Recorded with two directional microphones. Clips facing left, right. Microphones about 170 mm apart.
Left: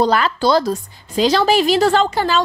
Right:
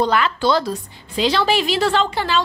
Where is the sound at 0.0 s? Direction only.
40° left (ahead or behind).